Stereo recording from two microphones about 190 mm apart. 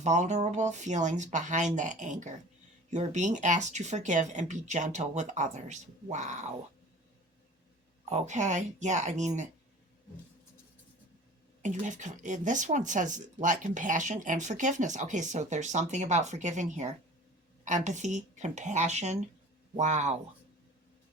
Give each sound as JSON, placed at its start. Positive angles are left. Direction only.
{"t": 0.0, "sound": "speech", "side_deg": -40}
{"t": 8.1, "sound": "speech", "side_deg": -40}
{"t": 11.6, "sound": "speech", "side_deg": -40}